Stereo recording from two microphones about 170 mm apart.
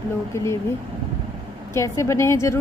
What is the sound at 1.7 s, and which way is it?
Speech, 15° left (ahead or behind).